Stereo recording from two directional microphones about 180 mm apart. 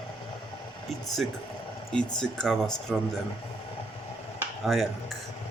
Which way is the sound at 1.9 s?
5° left (ahead or behind).